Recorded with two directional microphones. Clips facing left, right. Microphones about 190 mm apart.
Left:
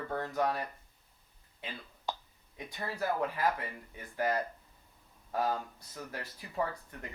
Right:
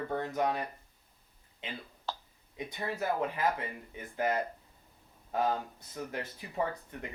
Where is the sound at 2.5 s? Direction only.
20° right (ahead or behind).